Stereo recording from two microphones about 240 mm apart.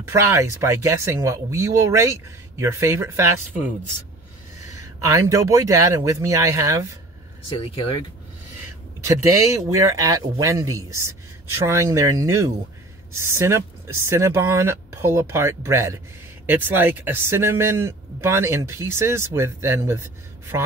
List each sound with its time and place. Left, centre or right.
0.1 s speech: centre
7.4 s speech: left
8.6 s speech: centre